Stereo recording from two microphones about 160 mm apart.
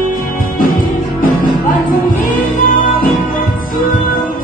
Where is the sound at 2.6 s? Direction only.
65° left (ahead or behind).